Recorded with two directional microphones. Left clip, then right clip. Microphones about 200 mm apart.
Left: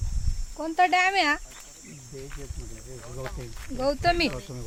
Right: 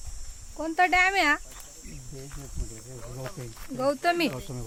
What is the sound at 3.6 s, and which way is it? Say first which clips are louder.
Speech: left 1 dB; centre (ahead or behind).